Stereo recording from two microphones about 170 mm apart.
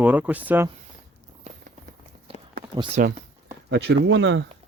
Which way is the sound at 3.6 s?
90° right.